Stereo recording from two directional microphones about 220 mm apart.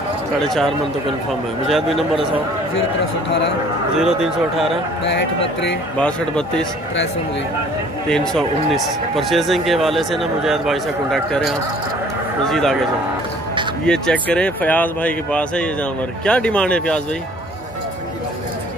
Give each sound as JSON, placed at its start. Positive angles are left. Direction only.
{"t": 0.4, "sound": "speech", "side_deg": 0}
{"t": 4.0, "sound": "speech", "side_deg": 0}
{"t": 5.0, "sound": "speech", "side_deg": 55}
{"t": 5.9, "sound": "speech", "side_deg": 5}
{"t": 8.3, "sound": "speech", "side_deg": 0}
{"t": 13.8, "sound": "speech", "side_deg": 5}